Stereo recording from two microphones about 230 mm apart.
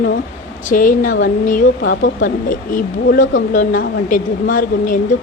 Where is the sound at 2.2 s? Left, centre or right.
Left.